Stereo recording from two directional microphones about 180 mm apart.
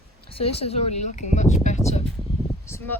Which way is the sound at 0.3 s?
35° left (ahead or behind).